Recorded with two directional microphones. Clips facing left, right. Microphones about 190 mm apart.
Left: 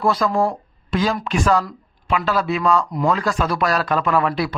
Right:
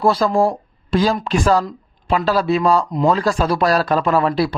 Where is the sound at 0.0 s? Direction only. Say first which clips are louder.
Right 3 dB; 30° right (ahead or behind).